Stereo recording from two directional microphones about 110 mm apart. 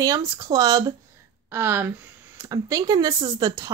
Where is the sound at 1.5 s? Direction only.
20° right (ahead or behind).